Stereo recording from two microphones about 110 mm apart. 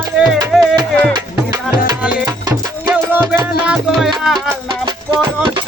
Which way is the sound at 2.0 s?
10° right (ahead or behind).